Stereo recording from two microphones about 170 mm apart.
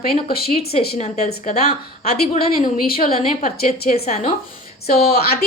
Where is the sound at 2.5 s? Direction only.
55° left (ahead or behind).